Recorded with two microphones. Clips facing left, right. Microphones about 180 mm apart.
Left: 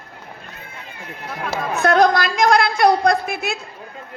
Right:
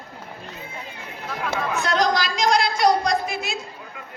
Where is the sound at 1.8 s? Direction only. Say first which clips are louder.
Left 8 dB; 55° left (ahead or behind).